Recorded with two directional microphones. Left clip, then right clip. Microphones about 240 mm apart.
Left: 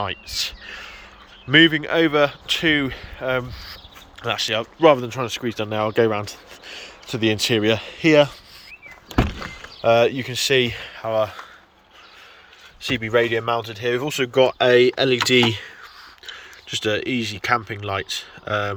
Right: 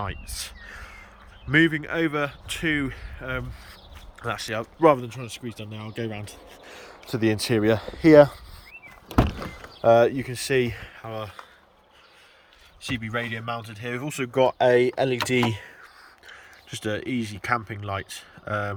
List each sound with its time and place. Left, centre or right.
0.0 s speech: centre
5.0 s speech: centre
12.8 s speech: centre